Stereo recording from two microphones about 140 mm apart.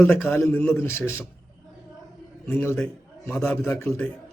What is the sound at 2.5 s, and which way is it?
A man's voice, 15° left (ahead or behind).